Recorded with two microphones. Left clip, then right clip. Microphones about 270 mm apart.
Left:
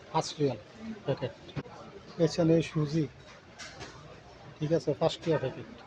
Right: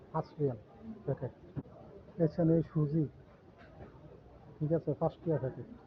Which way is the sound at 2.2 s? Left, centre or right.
Centre.